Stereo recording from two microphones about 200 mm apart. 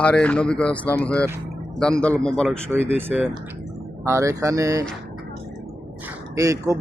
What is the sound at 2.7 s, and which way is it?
Speech, 10° right (ahead or behind).